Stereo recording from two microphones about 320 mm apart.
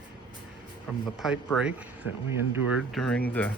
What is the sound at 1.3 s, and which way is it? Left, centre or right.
Speech, centre.